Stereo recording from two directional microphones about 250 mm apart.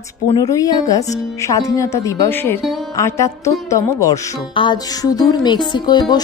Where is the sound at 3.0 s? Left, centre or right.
Centre.